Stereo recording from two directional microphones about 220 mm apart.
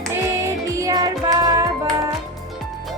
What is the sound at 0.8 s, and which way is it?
Music, 15° right (ahead or behind).